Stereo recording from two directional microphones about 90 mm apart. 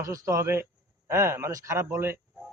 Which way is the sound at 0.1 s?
35° right (ahead or behind).